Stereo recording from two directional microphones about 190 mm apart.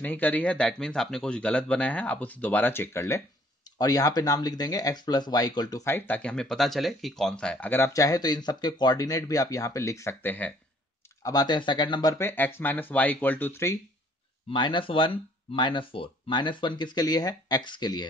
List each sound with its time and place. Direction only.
0.0 s speech: 10° left (ahead or behind)
11.2 s speech: 20° left (ahead or behind)
14.5 s speech: 25° left (ahead or behind)